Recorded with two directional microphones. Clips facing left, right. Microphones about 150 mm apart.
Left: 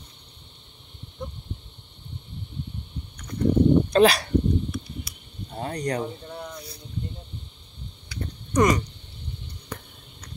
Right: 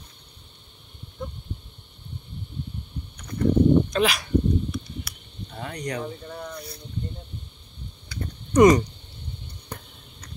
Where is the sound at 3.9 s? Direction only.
35° left (ahead or behind).